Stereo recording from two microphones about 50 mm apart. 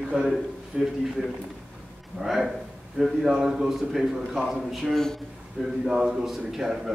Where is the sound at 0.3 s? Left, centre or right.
Centre.